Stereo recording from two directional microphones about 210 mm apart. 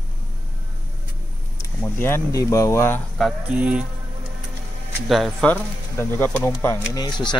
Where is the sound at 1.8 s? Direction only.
10° left (ahead or behind).